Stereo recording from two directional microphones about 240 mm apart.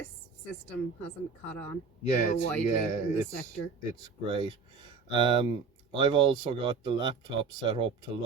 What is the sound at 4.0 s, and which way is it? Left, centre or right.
Speech, right.